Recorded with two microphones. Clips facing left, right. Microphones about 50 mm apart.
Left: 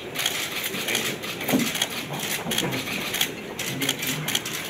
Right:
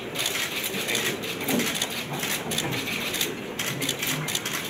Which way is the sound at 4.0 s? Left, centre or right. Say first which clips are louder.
Even; right.